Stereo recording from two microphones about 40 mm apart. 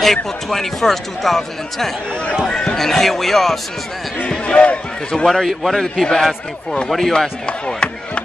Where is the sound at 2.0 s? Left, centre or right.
Left.